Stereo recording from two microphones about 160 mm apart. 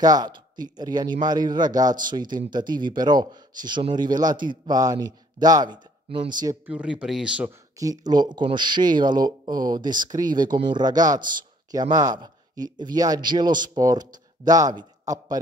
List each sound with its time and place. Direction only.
0.0 s speech: 25° right (ahead or behind)
6.6 s speech: 5° right (ahead or behind)
7.7 s speech: 20° right (ahead or behind)